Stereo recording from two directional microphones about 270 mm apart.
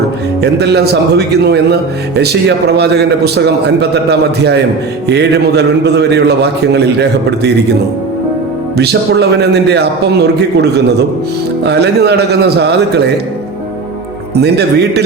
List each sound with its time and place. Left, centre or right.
0.4 s a man's voice: right
8.7 s a man's voice: right
14.3 s a man's voice: right